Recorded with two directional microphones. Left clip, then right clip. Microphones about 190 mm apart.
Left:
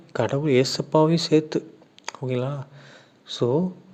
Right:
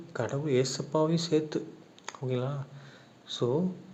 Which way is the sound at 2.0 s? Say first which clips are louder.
Left 6 dB; 40° left (ahead or behind).